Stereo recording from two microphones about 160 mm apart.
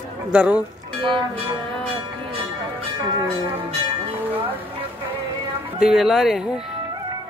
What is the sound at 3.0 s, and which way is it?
Speech, 20° right (ahead or behind).